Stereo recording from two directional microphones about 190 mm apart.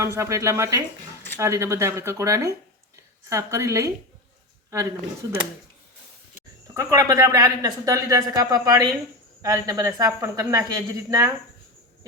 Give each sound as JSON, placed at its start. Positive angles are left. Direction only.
{"t": 0.0, "sound": "speech", "side_deg": -15}
{"t": 6.7, "sound": "speech", "side_deg": -15}